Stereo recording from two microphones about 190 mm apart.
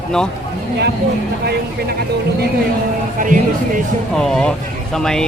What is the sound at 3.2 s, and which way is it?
Speech, 45° right (ahead or behind).